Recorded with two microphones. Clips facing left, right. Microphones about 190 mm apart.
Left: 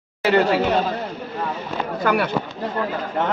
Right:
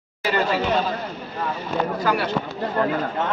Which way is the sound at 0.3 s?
65° left (ahead or behind).